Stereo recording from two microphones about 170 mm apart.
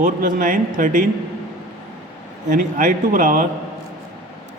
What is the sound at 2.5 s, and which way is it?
Speech, 50° right (ahead or behind).